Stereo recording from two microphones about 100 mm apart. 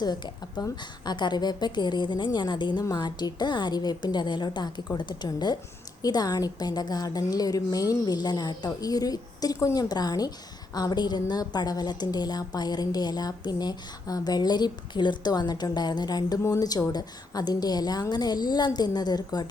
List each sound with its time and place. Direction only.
0.0 s a woman's voice: 45° left (ahead or behind)